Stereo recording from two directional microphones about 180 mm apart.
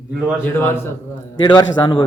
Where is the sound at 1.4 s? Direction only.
25° left (ahead or behind).